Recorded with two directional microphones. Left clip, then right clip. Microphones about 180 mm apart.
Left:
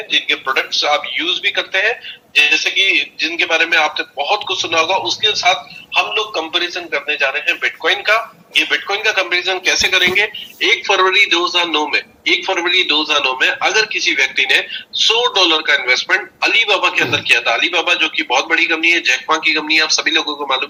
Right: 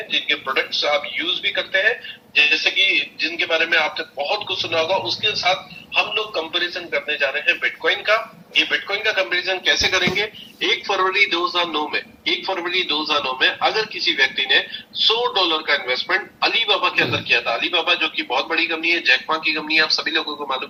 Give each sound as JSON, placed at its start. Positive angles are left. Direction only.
{"t": 0.1, "sound": "a man's voice", "side_deg": 35}